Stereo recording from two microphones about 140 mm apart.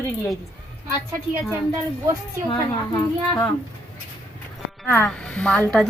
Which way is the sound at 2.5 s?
30° left (ahead or behind).